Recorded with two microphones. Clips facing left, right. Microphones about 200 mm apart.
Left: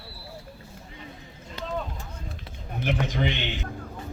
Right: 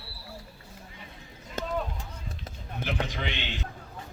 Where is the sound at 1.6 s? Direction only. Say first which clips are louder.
Right 2 dB; 45° right (ahead or behind).